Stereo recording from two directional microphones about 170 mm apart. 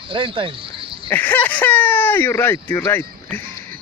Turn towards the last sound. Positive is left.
turn(degrees=15)  # may be behind; listen again after turning